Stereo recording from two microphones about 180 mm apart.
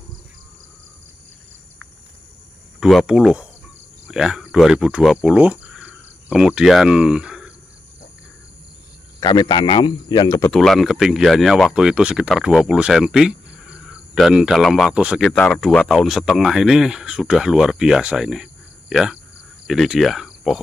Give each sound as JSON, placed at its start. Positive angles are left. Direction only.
{"t": 2.8, "sound": "speech", "side_deg": 0}
{"t": 9.2, "sound": "a man's voice", "side_deg": 25}
{"t": 10.5, "sound": "speech", "side_deg": 0}
{"t": 19.7, "sound": "cricket", "side_deg": 0}